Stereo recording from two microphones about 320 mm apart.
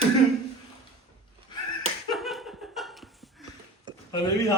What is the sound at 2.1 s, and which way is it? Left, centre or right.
Laughter, centre.